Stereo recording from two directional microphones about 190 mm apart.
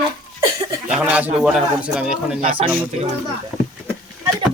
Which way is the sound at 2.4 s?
30° right (ahead or behind).